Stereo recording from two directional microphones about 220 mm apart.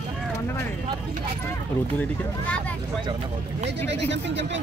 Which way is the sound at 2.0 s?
5° left (ahead or behind).